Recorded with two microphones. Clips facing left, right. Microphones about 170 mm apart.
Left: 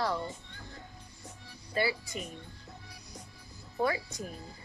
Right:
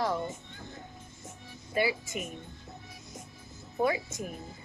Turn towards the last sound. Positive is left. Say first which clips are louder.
# right 3 dB
turn(degrees=-20)  # may be behind; listen again after turning